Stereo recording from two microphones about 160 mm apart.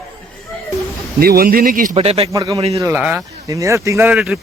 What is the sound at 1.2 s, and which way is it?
Speech, 70° right (ahead or behind).